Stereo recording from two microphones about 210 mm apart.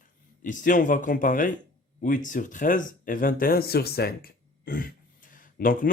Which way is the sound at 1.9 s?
40° left (ahead or behind).